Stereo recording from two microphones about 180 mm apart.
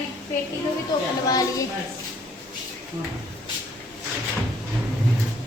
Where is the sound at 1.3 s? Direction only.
20° left (ahead or behind).